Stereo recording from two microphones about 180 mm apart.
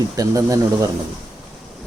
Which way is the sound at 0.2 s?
20° right (ahead or behind).